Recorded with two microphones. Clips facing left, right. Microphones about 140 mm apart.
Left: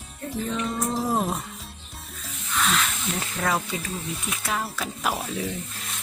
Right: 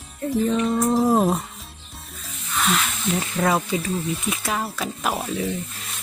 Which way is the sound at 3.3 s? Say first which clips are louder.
Right 5 dB; 20° right (ahead or behind).